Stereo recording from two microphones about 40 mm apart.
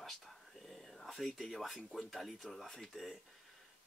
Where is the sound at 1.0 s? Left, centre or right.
Centre.